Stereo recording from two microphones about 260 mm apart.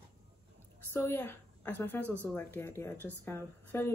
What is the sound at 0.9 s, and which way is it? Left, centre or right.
A woman's voice, centre.